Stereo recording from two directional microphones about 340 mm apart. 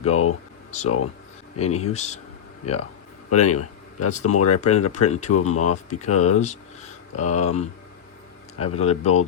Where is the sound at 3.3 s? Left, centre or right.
Left.